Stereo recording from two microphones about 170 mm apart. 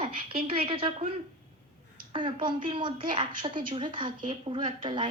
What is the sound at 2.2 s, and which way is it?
A woman's voice, 30° right (ahead or behind).